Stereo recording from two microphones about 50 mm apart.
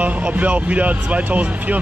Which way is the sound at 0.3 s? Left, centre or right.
Right.